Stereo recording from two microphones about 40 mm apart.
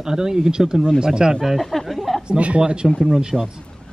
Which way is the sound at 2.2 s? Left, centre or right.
Right.